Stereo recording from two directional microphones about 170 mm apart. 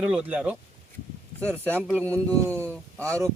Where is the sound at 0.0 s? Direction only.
5° right (ahead or behind).